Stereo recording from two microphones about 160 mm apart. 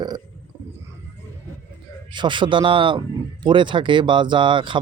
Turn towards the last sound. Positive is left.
turn(degrees=-30)  # may be behind; listen again after turning